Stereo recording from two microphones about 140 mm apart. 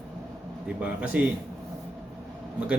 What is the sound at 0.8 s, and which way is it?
Speech, 10° right (ahead or behind).